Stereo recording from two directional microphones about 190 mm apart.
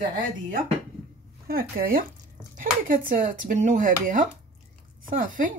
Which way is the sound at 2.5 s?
45° right (ahead or behind).